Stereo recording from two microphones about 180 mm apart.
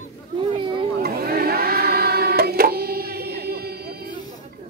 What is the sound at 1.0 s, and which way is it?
Music, 55° right (ahead or behind).